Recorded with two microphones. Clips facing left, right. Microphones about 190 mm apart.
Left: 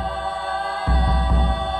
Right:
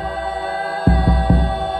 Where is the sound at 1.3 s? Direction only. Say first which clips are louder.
Right 10 dB; 55° right (ahead or behind).